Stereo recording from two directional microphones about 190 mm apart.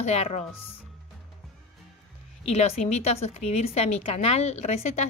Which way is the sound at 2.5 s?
35° left (ahead or behind).